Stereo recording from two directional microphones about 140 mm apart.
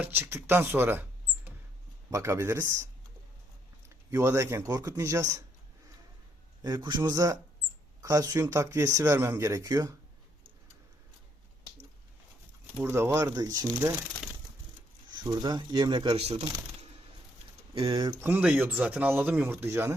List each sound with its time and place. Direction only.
0.0 s speech: 15° right (ahead or behind)
2.0 s speech: 20° right (ahead or behind)
6.6 s speech: 30° right (ahead or behind)
12.8 s speech: 20° right (ahead or behind)
15.1 s speech: 30° right (ahead or behind)
16.2 s speech: 45° right (ahead or behind)
17.7 s speech: 35° right (ahead or behind)
18.2 s speech: 10° right (ahead or behind)